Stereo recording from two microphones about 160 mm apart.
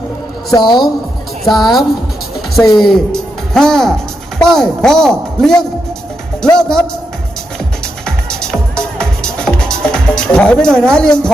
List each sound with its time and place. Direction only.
0.5 s a woman's voice: 30° left (ahead or behind)
1.5 s a man's voice: centre (ahead or behind)
8.0 s music: 5° left (ahead or behind)